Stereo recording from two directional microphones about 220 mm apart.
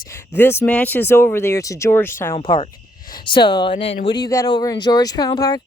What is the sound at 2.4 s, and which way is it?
Speech, 25° left (ahead or behind).